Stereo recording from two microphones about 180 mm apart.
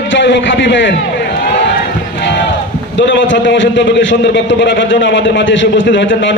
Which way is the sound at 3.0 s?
90° left.